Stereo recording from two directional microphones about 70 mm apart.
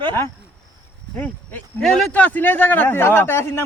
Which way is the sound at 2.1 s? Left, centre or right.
Left.